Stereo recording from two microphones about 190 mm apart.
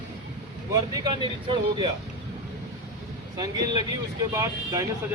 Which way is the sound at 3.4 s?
20° right (ahead or behind).